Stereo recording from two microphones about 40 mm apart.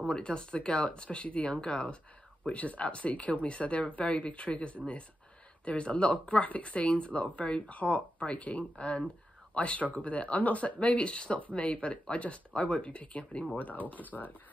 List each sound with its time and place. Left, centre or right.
0.1 s speech: left
13.6 s speech: left